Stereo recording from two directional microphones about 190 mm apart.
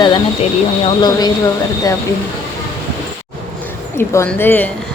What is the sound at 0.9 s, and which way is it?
Speech, 20° left (ahead or behind).